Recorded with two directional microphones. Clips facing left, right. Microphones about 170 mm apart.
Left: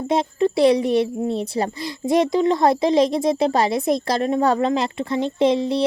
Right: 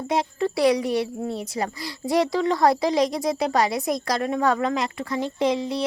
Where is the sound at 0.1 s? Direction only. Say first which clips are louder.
Left 5 dB; 25° left (ahead or behind).